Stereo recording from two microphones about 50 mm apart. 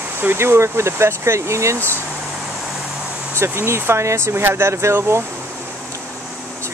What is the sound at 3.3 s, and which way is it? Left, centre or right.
Speech, right.